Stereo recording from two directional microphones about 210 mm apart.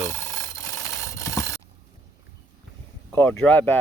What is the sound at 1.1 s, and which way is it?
Mechanisms, 15° left (ahead or behind).